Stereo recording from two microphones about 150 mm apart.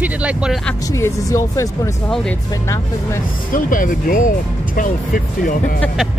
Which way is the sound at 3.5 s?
65° left (ahead or behind).